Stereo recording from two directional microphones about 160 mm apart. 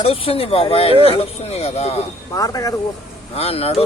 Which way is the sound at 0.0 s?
35° left (ahead or behind).